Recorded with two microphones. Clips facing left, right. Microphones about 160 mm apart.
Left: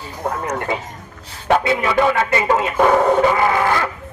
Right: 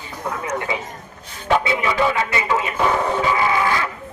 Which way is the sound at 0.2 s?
50° left (ahead or behind).